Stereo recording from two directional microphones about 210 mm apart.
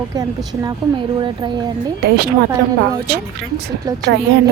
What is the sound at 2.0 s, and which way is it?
Speech, 50° right (ahead or behind).